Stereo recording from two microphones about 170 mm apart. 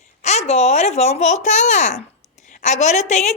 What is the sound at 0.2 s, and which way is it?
A woman's voice, 40° left (ahead or behind).